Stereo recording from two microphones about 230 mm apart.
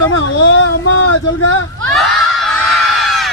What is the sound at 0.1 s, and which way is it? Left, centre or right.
Speech, left.